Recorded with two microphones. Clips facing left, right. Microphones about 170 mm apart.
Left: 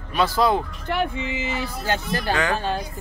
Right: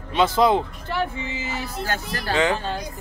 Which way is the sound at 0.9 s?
20° left (ahead or behind).